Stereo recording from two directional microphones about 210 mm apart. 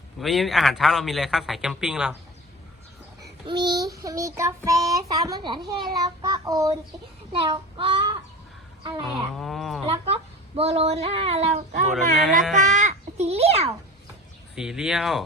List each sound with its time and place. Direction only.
0.2 s a man's voice: centre (ahead or behind)
3.4 s child singing: 20° right (ahead or behind)
3.9 s a child's voice: 15° right (ahead or behind)
7.3 s child singing: 25° right (ahead or behind)
9.0 s a man's voice: centre (ahead or behind)
9.8 s speech: 30° right (ahead or behind)
12.2 s a man's voice: centre (ahead or behind)
12.7 s a child's voice: 35° right (ahead or behind)
14.5 s a man's voice: 5° right (ahead or behind)